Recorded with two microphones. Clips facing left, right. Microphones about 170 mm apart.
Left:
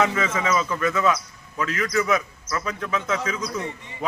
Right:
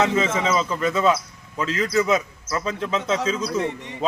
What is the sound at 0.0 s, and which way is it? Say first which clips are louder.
Speech: right 2 dB; 25° right (ahead or behind).